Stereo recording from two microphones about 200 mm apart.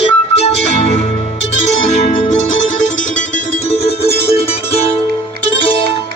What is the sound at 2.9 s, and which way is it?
Music, 35° left (ahead or behind).